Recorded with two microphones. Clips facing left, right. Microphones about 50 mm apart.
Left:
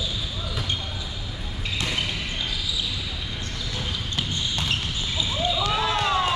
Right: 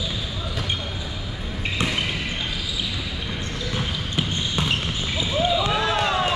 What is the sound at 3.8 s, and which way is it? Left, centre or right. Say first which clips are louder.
Basketball bounce: right 2 dB; centre.